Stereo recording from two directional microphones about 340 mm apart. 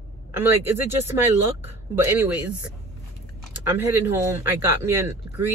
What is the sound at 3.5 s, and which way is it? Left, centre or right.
Speech, centre.